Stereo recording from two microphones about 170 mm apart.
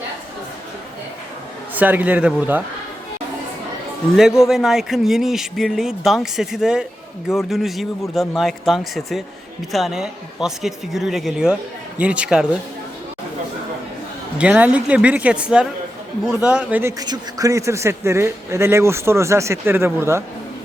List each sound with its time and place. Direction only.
1.7 s a man's voice: 10° right (ahead or behind)
4.2 s a man's voice: 5° right (ahead or behind)
14.3 s a man's voice: 5° right (ahead or behind)
17.0 s a man's voice: 20° right (ahead or behind)